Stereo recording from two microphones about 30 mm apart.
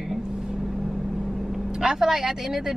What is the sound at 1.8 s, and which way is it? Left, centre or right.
Speech, centre.